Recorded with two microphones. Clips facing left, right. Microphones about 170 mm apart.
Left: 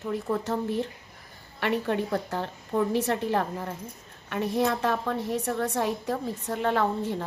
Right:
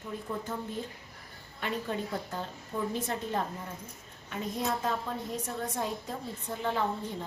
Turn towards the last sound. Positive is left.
turn(degrees=70)  # may be behind; listen again after turning